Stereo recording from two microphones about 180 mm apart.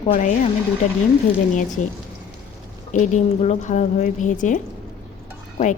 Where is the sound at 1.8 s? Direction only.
40° left (ahead or behind).